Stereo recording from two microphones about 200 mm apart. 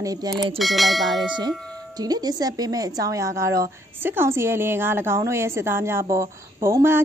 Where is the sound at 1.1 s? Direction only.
20° right (ahead or behind).